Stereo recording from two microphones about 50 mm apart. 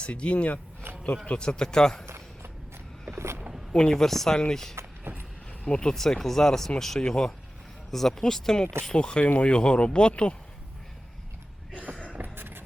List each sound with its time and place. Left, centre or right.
0.0 s speech: left
2.0 s a sound: right
3.7 s speech: centre
5.1 s a sound: right
5.6 s speech: centre
9.2 s speech: left
9.5 s speech: left
12.1 s vehicle: right